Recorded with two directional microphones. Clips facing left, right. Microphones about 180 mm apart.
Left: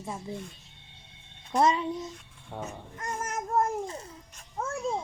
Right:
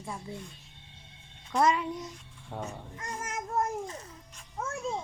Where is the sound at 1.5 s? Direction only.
25° left (ahead or behind).